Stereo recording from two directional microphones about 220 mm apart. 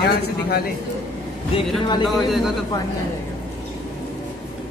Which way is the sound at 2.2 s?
Centre (ahead or behind).